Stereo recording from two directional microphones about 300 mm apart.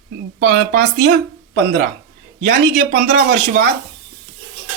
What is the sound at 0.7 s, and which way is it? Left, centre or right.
Speech, right.